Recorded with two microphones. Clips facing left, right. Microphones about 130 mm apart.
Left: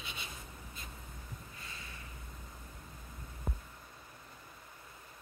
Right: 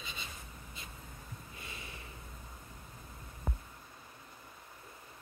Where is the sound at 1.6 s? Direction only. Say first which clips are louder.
Right 2 dB; 20° right (ahead or behind).